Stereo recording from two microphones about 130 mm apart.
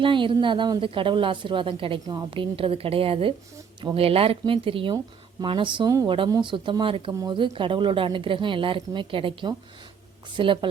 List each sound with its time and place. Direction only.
0.0 s a woman's voice: 40° right (ahead or behind)
7.1 s a woman's voice: 30° right (ahead or behind)